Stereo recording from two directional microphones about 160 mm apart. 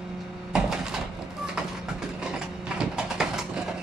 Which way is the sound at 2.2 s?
5° right (ahead or behind).